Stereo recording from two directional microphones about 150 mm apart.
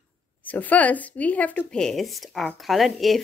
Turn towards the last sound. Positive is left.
turn(degrees=0)  # may be behind; listen again after turning